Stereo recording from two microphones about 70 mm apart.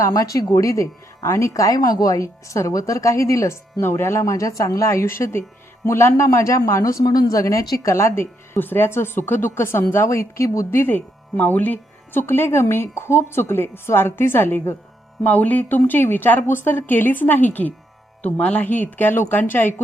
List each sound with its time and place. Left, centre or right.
0.0 s speech: left
6.2 s speech: left
15.2 s speech: left